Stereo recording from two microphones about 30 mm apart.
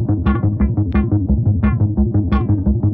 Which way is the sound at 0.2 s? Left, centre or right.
Right.